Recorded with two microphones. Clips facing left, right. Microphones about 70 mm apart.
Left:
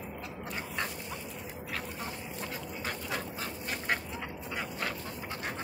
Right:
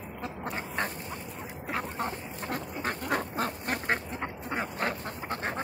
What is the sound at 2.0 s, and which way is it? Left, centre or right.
Duck, right.